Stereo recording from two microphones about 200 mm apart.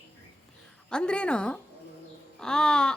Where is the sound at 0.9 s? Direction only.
5° left (ahead or behind).